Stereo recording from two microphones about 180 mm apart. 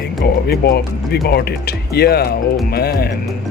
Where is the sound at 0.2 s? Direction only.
60° left (ahead or behind).